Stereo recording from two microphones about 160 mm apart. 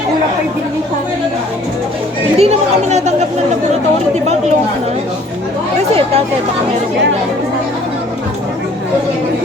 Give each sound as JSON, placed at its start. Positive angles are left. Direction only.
{"t": 2.4, "sound": "a woman's voice", "side_deg": -45}
{"t": 5.7, "sound": "speech", "side_deg": -40}